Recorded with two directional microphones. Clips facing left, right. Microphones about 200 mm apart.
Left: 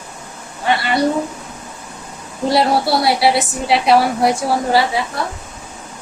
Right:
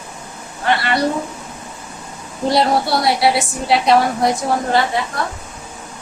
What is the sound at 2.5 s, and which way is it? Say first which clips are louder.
A woman's voice: left 1 dB; 5° left (ahead or behind).